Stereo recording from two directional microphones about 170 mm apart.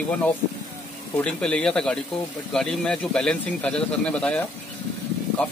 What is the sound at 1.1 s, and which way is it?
A man's voice, 5° left (ahead or behind).